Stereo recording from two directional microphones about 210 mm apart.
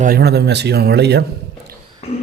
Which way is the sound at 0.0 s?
50° right (ahead or behind).